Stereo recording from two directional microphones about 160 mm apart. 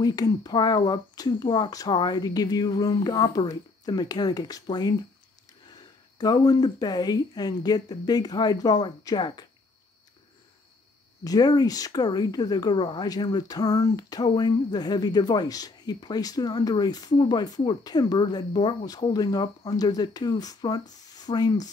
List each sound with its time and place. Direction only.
0.0 s speech: 25° left (ahead or behind)
6.1 s speech: 25° left (ahead or behind)
11.2 s speech: 25° left (ahead or behind)